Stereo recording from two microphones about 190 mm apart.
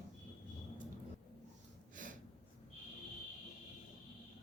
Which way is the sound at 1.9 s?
45° right (ahead or behind).